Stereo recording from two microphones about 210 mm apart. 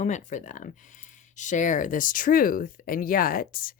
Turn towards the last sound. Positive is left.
turn(degrees=45)  # may be behind; listen again after turning